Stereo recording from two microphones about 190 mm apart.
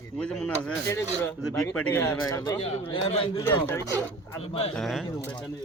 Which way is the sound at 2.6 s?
30° left (ahead or behind).